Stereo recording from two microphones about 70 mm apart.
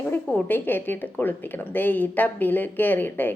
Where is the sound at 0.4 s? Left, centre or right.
Left.